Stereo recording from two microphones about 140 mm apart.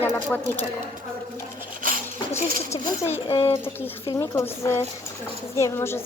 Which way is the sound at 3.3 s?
40° left (ahead or behind).